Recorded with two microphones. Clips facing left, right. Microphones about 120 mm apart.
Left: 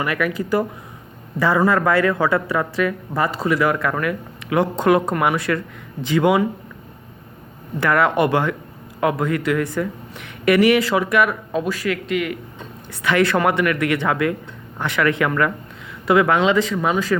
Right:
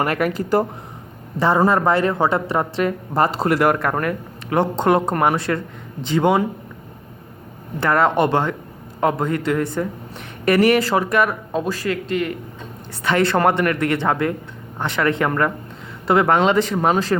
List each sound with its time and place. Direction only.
0.0 s speech: 35° right (ahead or behind)
3.4 s speech: 60° right (ahead or behind)
3.8 s speech: 45° right (ahead or behind); by 6.4 s 30° right (ahead or behind)
7.8 s speech: 30° right (ahead or behind); by 16.6 s 45° right (ahead or behind)
16.7 s speech: 35° right (ahead or behind)